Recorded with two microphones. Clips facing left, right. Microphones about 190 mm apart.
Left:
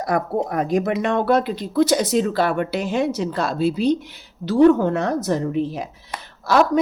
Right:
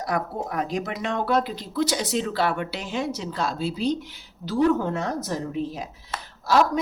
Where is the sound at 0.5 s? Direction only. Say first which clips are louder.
Left 7 dB; 50° left (ahead or behind).